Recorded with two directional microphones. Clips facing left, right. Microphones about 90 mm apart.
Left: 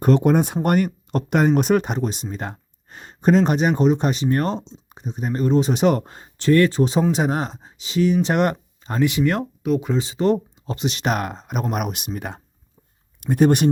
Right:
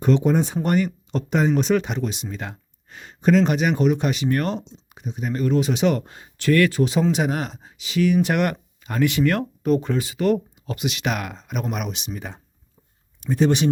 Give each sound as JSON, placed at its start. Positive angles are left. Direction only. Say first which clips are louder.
{"t": 0.0, "sound": "speech", "louder": "left 2 dB", "side_deg": 50}
{"t": 9.6, "sound": "speech", "louder": "right 1 dB", "side_deg": 0}
{"t": 9.9, "sound": "speech", "louder": "left 1 dB", "side_deg": 25}
{"t": 11.7, "sound": "speech", "louder": "left 3 dB", "side_deg": 50}